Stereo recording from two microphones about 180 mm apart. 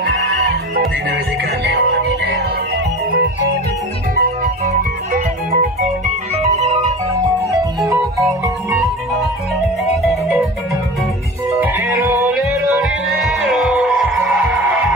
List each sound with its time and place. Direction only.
0.0 s music: 70° right (ahead or behind)
4.1 s music: 50° right (ahead or behind); by 6.9 s 35° right (ahead or behind)
11.6 s music: 10° right (ahead or behind)
12.7 s music: centre (ahead or behind)